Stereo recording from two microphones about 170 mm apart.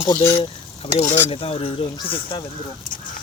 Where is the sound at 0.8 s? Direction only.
30° left (ahead or behind).